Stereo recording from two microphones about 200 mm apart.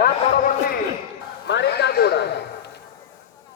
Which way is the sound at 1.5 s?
55° left (ahead or behind).